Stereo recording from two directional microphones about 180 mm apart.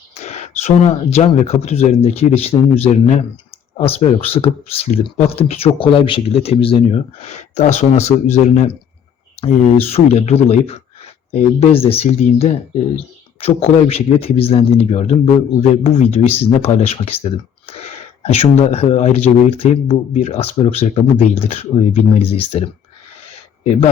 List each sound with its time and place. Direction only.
0.1 s speech: 40° left (ahead or behind)